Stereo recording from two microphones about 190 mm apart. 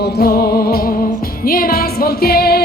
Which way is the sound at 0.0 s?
50° left (ahead or behind).